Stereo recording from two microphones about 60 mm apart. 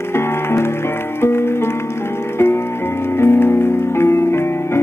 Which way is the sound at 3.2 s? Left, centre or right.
Left.